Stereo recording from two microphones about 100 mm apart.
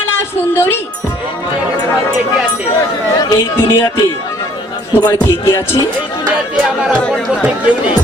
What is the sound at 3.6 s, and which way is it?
Speech, 25° left (ahead or behind).